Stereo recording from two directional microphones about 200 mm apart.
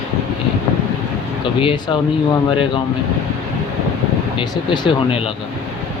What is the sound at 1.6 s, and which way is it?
Speech, 25° left (ahead or behind).